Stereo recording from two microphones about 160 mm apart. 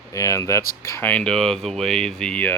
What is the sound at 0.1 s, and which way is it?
Speech, 20° left (ahead or behind).